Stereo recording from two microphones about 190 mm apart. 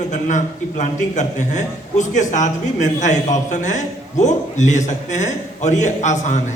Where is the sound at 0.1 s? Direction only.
40° left (ahead or behind).